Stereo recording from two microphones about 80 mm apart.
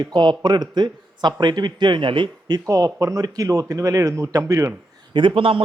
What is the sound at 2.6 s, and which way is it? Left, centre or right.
Speech, right.